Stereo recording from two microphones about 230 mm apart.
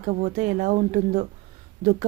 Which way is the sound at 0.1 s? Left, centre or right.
Right.